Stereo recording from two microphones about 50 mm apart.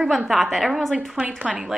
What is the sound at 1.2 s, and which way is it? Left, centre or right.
Speech, right.